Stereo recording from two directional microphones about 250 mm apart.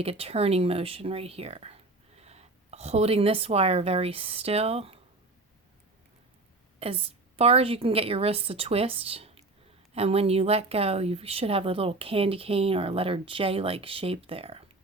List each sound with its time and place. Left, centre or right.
0.0 s speech: right
6.7 s a woman's voice: right